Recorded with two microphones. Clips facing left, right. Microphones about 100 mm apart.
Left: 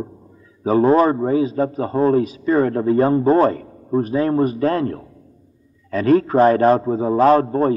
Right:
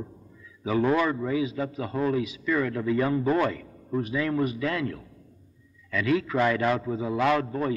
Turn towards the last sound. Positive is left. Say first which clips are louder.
# left 10 dB
turn(degrees=40)  # may be behind; listen again after turning